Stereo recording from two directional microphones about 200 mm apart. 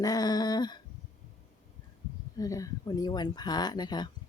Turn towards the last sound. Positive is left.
turn(degrees=20)  # may be behind; listen again after turning